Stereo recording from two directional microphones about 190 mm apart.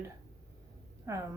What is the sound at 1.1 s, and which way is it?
Speech, 15° right (ahead or behind).